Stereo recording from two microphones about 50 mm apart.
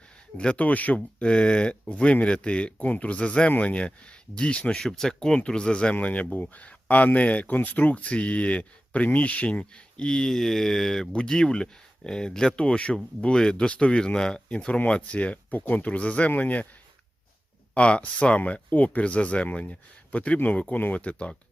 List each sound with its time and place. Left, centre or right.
0.3 s speech: left
4.8 s speech: centre; by 16.6 s left
17.7 s speech: left